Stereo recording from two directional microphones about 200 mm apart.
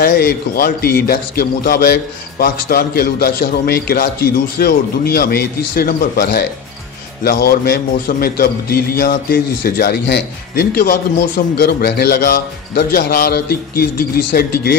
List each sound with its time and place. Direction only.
0.0 s a man's voice: 50° left (ahead or behind)